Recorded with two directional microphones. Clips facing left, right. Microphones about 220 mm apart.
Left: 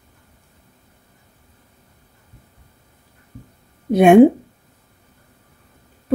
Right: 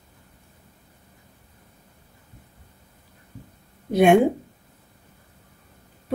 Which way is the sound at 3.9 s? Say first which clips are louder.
Left 4 dB; 50° left (ahead or behind).